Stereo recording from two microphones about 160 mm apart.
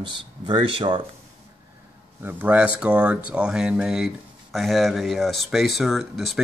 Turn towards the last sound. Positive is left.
turn(degrees=0)  # may be behind; listen again after turning